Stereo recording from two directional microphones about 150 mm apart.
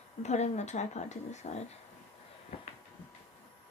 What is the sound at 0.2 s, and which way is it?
Speech, 50° left (ahead or behind).